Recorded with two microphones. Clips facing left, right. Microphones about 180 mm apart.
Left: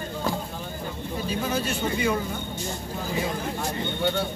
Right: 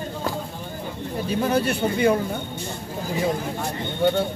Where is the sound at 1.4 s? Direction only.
60° right (ahead or behind).